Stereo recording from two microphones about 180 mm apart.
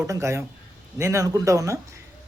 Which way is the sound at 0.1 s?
15° right (ahead or behind).